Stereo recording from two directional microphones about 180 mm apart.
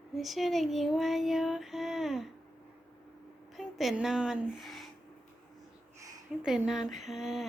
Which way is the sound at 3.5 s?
Centre (ahead or behind).